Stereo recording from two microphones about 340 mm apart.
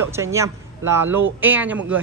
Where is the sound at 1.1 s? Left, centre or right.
Right.